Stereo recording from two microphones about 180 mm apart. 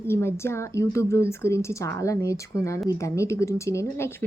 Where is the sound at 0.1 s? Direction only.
15° left (ahead or behind).